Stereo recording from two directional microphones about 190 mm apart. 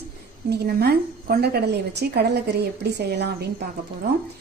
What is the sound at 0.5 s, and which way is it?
A woman's voice, 55° right (ahead or behind).